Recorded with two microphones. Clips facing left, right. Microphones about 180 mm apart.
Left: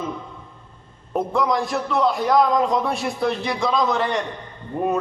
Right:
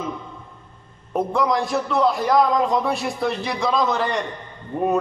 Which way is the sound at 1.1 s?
Centre (ahead or behind).